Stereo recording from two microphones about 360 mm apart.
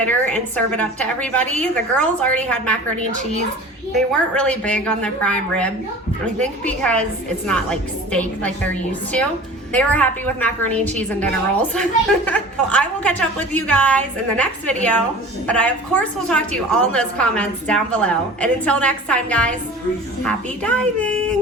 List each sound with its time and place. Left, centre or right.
0.0 s a woman's voice: centre